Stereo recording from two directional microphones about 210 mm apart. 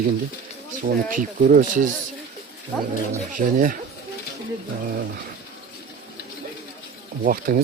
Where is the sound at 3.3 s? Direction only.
40° right (ahead or behind).